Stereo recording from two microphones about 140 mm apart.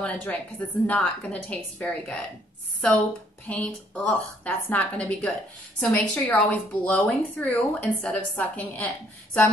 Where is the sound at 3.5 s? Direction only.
10° left (ahead or behind).